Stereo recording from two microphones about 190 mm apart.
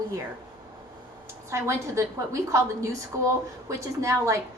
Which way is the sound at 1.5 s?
15° right (ahead or behind).